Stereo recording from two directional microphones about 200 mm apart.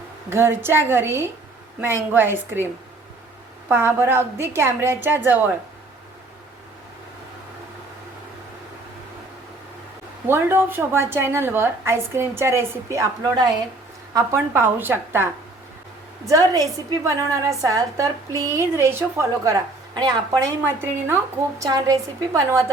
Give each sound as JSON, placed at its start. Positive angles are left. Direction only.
{"t": 0.3, "sound": "a woman's voice", "side_deg": -10}
{"t": 3.7, "sound": "a woman's voice", "side_deg": -10}
{"t": 10.2, "sound": "a woman's voice", "side_deg": -10}
{"t": 16.5, "sound": "a woman's voice", "side_deg": -15}